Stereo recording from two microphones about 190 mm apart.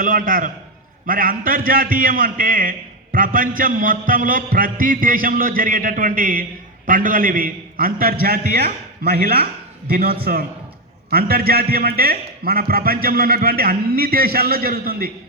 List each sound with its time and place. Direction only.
0.0 s a man's voice: 45° right (ahead or behind)